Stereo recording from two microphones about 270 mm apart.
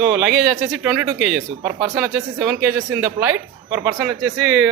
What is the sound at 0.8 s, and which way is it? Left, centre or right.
Speech, centre.